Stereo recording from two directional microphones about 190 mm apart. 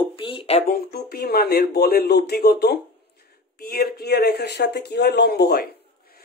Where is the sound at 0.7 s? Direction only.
55° left (ahead or behind).